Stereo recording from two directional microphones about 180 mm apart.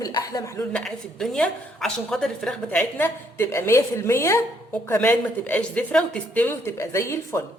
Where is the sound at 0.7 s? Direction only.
5° left (ahead or behind).